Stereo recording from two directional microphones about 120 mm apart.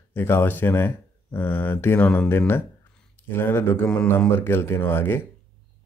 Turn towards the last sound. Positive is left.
turn(degrees=20)  # may be behind; listen again after turning